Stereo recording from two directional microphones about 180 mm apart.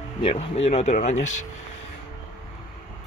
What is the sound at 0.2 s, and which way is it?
Speech, 35° left (ahead or behind).